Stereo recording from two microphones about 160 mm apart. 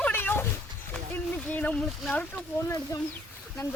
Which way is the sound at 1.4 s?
10° left (ahead or behind).